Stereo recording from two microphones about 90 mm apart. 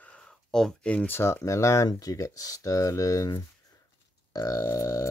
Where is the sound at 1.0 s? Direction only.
25° left (ahead or behind).